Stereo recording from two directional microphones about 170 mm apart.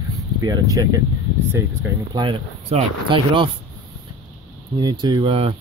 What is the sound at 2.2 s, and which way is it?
Speech, 35° right (ahead or behind).